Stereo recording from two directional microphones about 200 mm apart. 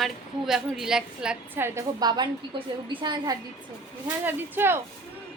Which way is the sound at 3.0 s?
20° right (ahead or behind).